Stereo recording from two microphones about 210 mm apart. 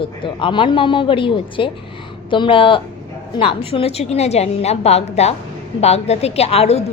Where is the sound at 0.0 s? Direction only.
25° left (ahead or behind).